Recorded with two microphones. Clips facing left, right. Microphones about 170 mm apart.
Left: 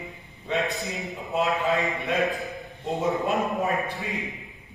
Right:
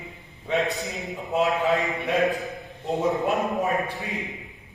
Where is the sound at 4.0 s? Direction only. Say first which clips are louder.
Even; centre (ahead or behind).